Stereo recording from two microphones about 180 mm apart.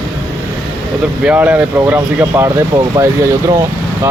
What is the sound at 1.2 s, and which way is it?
Speech, 5° right (ahead or behind).